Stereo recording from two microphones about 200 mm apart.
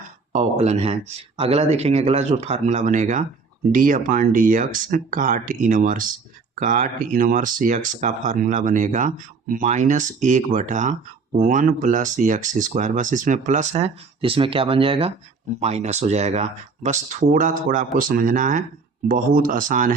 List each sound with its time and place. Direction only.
0.3 s speech: 30° right (ahead or behind)